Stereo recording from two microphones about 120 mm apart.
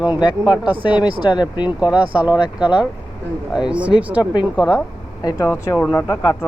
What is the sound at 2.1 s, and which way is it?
Speech, 10° right (ahead or behind).